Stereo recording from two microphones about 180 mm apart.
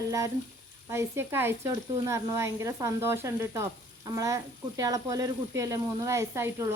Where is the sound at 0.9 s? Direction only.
15° right (ahead or behind).